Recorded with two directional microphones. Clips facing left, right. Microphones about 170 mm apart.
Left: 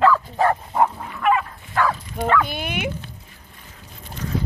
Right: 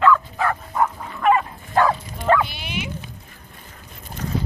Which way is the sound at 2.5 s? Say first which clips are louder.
Left 4 dB; 50° left (ahead or behind).